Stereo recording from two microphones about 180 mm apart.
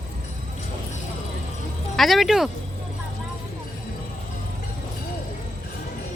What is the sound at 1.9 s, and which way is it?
Speech, centre (ahead or behind).